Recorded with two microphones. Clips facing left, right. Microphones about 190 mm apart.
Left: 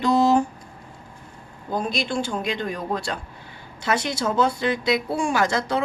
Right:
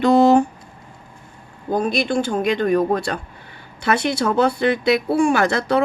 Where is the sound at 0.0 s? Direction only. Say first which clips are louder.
Right 5 dB; 60° right (ahead or behind).